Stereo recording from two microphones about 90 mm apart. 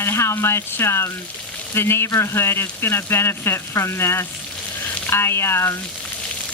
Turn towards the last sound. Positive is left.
turn(degrees=30)  # may be behind; listen again after turning